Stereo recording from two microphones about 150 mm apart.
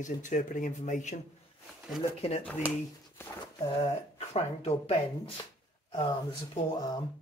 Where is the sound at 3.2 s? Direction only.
15° left (ahead or behind).